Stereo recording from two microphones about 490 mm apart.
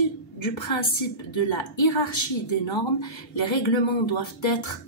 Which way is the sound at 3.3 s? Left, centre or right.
Left.